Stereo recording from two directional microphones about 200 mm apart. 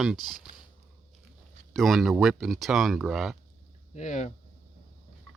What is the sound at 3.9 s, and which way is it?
Speech, 35° left (ahead or behind).